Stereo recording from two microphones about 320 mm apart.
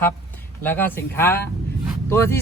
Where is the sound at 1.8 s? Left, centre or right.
Centre.